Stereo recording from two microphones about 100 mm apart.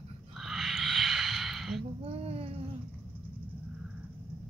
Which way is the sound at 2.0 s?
80° right.